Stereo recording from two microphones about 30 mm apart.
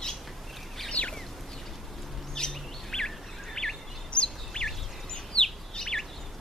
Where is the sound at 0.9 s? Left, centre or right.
Left.